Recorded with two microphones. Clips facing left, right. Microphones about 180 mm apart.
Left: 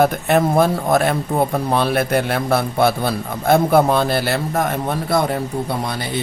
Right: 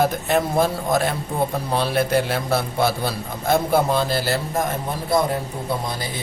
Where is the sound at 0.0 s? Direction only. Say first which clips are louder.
Left 4 dB; 60° left (ahead or behind).